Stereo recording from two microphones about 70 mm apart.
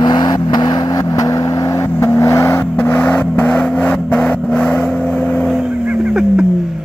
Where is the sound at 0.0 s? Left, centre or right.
Left.